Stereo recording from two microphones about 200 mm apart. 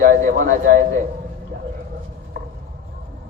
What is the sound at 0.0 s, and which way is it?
Speech, 40° right (ahead or behind).